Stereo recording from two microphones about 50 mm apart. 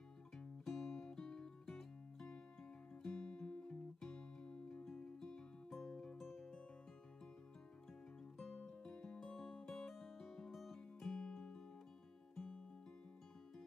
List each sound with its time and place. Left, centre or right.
0.7 s music: centre
6.2 s music: centre
8.4 s music: centre
8.6 s music: centre